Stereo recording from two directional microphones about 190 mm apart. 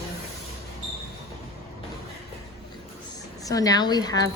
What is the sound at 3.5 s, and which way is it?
Speech, 20° left (ahead or behind).